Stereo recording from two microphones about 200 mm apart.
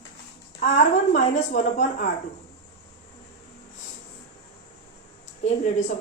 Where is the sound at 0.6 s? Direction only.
35° left (ahead or behind).